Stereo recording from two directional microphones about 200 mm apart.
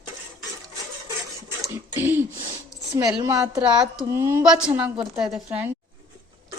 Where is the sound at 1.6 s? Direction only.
10° right (ahead or behind).